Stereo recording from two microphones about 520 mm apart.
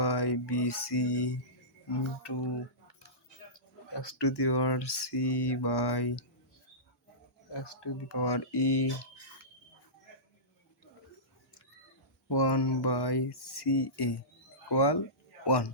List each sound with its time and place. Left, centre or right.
0.0 s mantra: left
4.2 s speech: left
7.5 s speech: left
12.3 s speech: left